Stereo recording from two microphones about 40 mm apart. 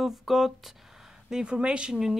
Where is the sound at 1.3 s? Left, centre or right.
Right.